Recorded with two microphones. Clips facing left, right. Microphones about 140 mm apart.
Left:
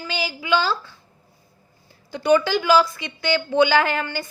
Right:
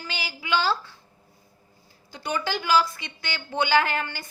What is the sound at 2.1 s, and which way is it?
A woman's voice, 70° left (ahead or behind).